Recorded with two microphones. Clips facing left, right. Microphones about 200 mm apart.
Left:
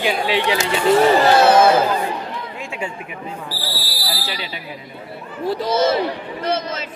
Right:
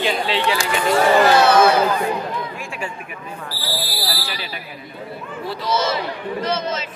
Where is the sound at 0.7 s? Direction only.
30° left (ahead or behind).